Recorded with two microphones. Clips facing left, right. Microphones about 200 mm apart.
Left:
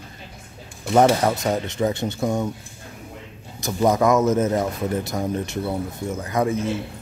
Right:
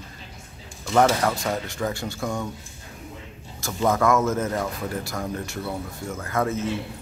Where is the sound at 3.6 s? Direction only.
15° left (ahead or behind).